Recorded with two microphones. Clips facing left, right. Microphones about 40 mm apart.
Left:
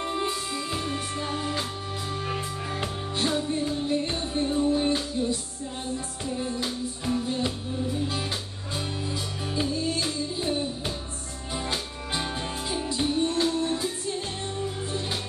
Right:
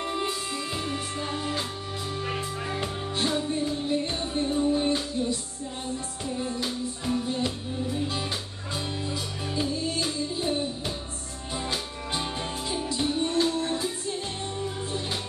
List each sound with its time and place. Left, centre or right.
0.0 s music: centre
3.2 s music: centre
6.3 s music: centre
9.6 s music: centre